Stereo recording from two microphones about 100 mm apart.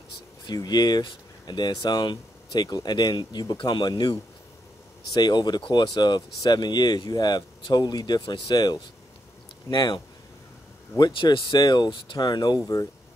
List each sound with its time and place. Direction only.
0.5 s speech: 45° left (ahead or behind)